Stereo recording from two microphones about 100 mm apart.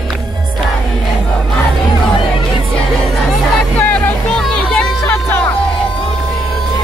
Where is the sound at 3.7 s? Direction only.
20° left (ahead or behind).